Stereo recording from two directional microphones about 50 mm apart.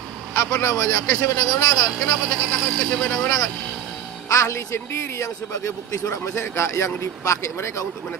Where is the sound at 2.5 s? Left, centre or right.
Left.